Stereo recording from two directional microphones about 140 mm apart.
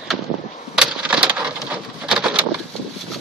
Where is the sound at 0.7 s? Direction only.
5° right (ahead or behind).